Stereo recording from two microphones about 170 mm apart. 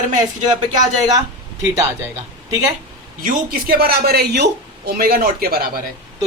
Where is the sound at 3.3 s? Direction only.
65° right (ahead or behind).